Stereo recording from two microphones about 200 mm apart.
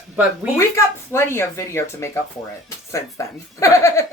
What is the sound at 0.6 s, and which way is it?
Speech, 15° left (ahead or behind).